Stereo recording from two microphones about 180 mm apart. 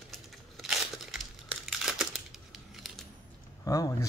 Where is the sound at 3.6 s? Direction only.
20° left (ahead or behind).